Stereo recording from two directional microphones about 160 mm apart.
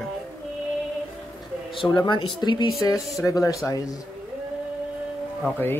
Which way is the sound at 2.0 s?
30° left (ahead or behind).